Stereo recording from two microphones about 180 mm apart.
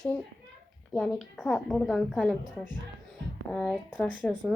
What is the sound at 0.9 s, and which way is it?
A woman's voice, centre (ahead or behind).